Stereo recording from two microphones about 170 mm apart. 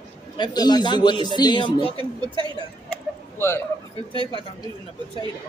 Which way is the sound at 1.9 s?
25° right (ahead or behind).